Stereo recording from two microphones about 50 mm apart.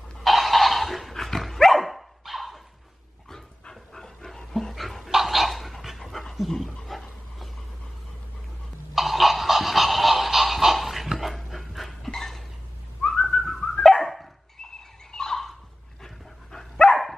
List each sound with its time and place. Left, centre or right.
0.2 s dog: centre
3.3 s dog: centre
8.9 s a sound: centre
13.0 s whistling: centre
13.8 s dog: centre
16.5 s dog: centre